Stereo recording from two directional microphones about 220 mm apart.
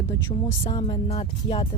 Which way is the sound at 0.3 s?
20° left (ahead or behind).